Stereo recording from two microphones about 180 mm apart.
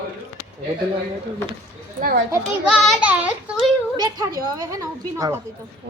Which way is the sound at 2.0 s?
55° right (ahead or behind).